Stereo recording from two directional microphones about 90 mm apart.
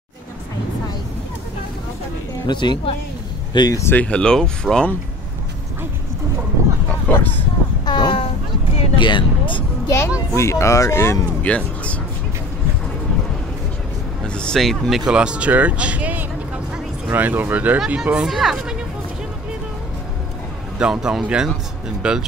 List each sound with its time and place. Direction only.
2.4 s speech: 60° left (ahead or behind)
3.9 s speech: 15° left (ahead or behind)
6.9 s speech: 20° left (ahead or behind)
7.8 s boat: 55° left (ahead or behind)
8.9 s speech: 60° left (ahead or behind)
9.8 s a child's voice: 30° left (ahead or behind)
11.4 s speech: 15° left (ahead or behind)
14.2 s speech: 10° left (ahead or behind)
20.8 s speech: 5° right (ahead or behind)